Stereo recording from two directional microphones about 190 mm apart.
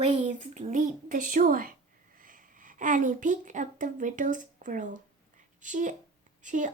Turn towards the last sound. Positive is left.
turn(degrees=-40)  # may be behind; listen again after turning